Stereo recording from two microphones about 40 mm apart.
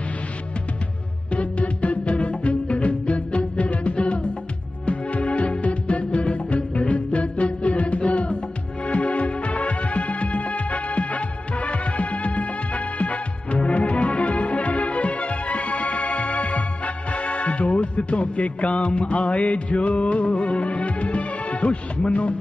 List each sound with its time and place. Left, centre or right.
1.3 s music: left